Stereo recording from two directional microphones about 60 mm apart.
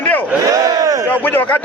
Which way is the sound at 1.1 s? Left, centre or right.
Left.